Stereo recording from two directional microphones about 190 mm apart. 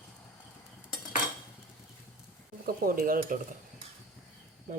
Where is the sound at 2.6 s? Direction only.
50° right (ahead or behind).